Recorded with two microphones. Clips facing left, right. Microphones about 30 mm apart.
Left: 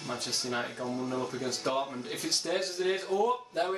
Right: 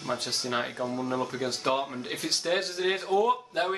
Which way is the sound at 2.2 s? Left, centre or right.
Right.